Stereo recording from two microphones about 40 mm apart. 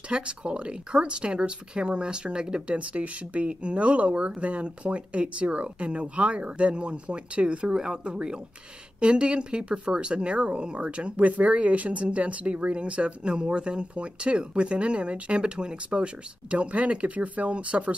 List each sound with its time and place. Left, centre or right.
0.1 s speech: right
2.8 s speech: right